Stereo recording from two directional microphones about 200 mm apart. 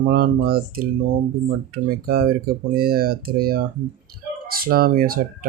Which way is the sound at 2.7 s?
50° right (ahead or behind).